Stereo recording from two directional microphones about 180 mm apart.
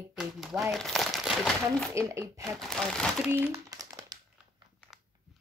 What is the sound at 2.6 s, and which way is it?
Speech, centre (ahead or behind).